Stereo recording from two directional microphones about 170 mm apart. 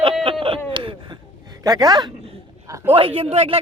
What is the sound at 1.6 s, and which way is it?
A man's voice, 20° right (ahead or behind).